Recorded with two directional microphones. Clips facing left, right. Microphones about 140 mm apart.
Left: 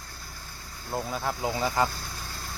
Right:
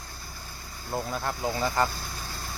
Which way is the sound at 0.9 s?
Centre (ahead or behind).